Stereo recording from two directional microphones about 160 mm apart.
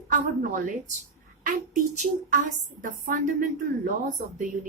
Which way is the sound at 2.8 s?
60° right (ahead or behind).